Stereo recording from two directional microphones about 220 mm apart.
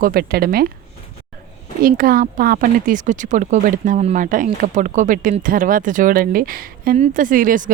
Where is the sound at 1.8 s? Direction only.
40° right (ahead or behind).